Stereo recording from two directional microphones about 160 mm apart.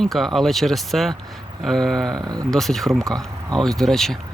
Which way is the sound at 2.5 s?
Centre (ahead or behind).